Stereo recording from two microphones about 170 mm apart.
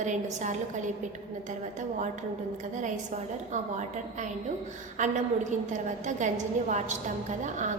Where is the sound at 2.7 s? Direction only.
45° right (ahead or behind).